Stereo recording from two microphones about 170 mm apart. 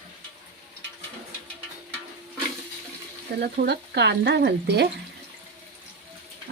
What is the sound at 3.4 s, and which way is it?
Frying, 70° right (ahead or behind).